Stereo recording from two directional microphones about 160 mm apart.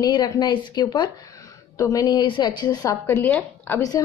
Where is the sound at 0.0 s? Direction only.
25° left (ahead or behind).